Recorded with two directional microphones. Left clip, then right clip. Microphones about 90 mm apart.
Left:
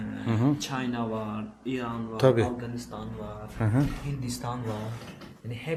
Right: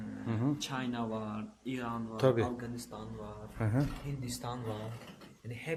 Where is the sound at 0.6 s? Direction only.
20° right (ahead or behind); by 2.0 s 35° right (ahead or behind).